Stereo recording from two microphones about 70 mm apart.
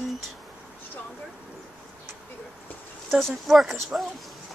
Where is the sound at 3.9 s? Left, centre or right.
Centre.